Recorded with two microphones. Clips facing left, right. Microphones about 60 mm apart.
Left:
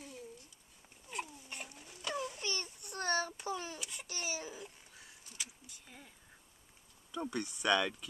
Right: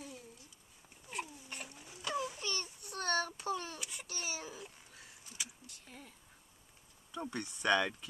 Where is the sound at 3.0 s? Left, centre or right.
Centre.